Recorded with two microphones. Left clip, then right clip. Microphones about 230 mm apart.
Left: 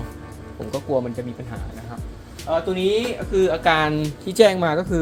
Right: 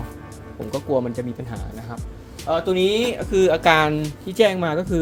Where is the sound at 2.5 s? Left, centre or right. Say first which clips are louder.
Right 1 dB; right.